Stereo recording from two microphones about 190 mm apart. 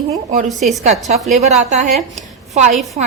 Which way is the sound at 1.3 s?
40° right (ahead or behind).